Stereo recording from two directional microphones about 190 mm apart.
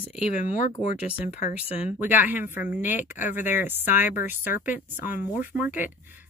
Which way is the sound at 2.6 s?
45° left (ahead or behind).